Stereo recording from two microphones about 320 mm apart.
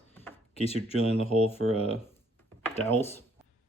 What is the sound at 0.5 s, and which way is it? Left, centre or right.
Speech, centre.